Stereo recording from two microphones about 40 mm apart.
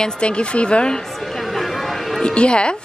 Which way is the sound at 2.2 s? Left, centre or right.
Left.